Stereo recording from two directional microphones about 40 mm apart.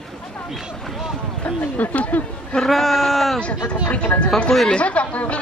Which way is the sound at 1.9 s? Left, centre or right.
Left.